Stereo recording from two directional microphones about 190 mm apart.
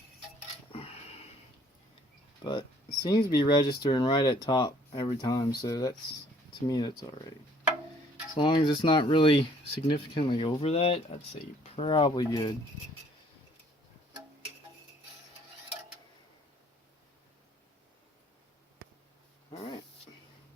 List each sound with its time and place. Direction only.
0.7 s a sound: 30° left (ahead or behind)
2.4 s speech: 25° left (ahead or behind)
8.4 s speech: 25° left (ahead or behind)
19.5 s dog: 25° left (ahead or behind)